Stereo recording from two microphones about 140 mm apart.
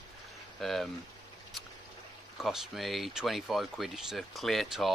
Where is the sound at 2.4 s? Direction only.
Centre (ahead or behind).